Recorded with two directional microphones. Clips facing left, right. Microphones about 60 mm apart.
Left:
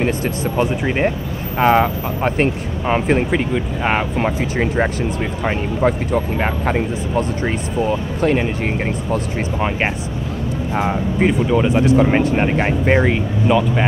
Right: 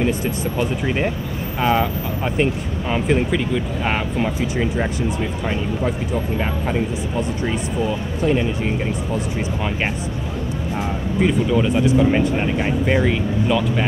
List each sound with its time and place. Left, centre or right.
0.6 s speech: left
4.4 s speech: left
8.4 s speech: left
10.7 s speech: left
11.1 s speech: left
11.8 s speech: left
13.1 s speech: centre